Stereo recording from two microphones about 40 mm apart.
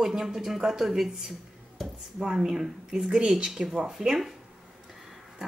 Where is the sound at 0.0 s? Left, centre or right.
Centre.